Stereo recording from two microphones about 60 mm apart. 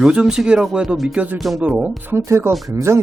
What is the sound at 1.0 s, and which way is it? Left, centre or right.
Speech, right.